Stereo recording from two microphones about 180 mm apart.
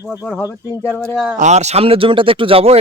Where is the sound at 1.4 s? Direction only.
40° right (ahead or behind).